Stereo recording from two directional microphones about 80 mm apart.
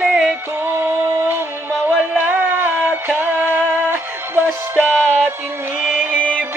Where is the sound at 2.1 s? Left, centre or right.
Right.